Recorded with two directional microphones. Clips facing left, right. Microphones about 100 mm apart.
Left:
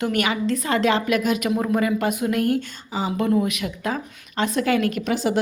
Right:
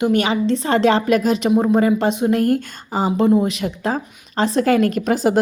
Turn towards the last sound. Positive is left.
turn(degrees=-40)  # may be behind; listen again after turning